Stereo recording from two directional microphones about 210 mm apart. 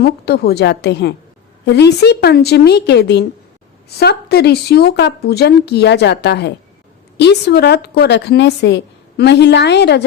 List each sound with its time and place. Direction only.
0.0 s a woman's voice: 50° left (ahead or behind)